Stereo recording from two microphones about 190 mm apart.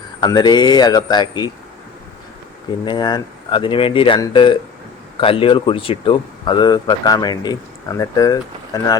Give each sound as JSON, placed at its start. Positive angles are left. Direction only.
{"t": 0.2, "sound": "speech", "side_deg": 20}
{"t": 2.8, "sound": "speech", "side_deg": 25}